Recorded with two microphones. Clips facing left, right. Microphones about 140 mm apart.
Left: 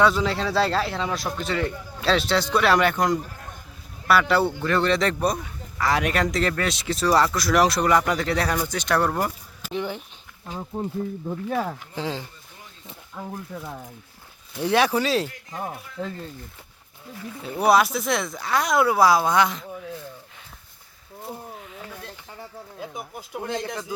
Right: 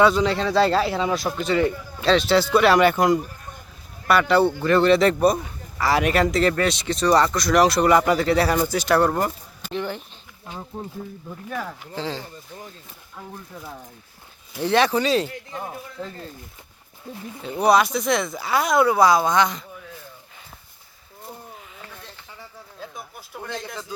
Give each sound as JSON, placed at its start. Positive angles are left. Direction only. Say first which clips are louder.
{"t": 0.0, "sound": "speech", "louder": "right 3 dB", "side_deg": 0}
{"t": 9.1, "sound": "a sound", "louder": "right 2 dB", "side_deg": 5}
{"t": 11.3, "sound": "speech", "louder": "left 4 dB", "side_deg": 35}
{"t": 11.9, "sound": "speech", "louder": "right 1 dB", "side_deg": 10}
{"t": 14.6, "sound": "speech", "louder": "right 1 dB", "side_deg": 10}
{"t": 17.4, "sound": "speech", "louder": "right 1 dB", "side_deg": 5}
{"t": 21.5, "sound": "a sound", "louder": "left 3 dB", "side_deg": 5}
{"t": 22.8, "sound": "speech", "louder": "left 2 dB", "side_deg": 20}